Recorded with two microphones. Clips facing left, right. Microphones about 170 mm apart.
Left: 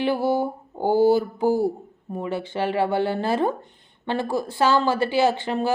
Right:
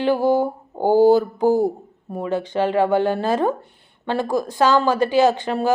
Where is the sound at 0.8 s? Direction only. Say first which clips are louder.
Right 4 dB; 15° right (ahead or behind).